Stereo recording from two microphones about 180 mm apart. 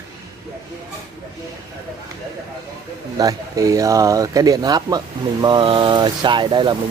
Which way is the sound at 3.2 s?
20° right (ahead or behind).